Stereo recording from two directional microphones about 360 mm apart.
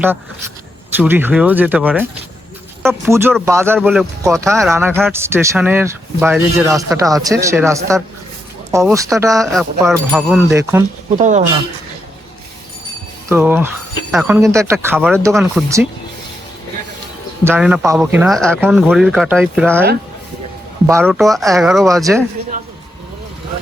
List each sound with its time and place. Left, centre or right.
0.9 s a man's voice: centre
11.2 s speech: centre
13.2 s speech: centre
17.4 s a man's voice: centre